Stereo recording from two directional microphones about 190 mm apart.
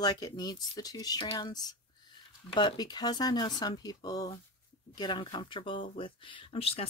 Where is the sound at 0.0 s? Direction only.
20° left (ahead or behind).